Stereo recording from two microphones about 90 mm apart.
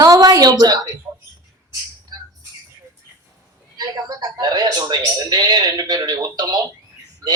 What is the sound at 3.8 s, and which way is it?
A woman's voice, 45° right (ahead or behind).